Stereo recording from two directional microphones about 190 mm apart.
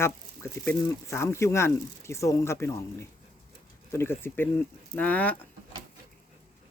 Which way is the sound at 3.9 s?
10° left (ahead or behind).